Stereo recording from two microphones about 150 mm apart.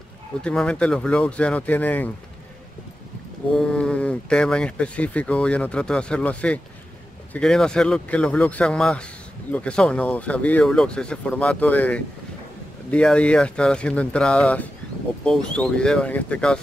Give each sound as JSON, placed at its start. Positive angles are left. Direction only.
{"t": 0.4, "sound": "speech", "side_deg": 5}
{"t": 3.5, "sound": "speech", "side_deg": 5}